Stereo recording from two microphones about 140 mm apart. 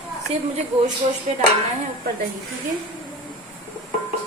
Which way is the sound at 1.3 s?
55° right (ahead or behind).